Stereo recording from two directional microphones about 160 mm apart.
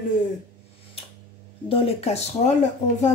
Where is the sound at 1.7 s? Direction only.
35° left (ahead or behind).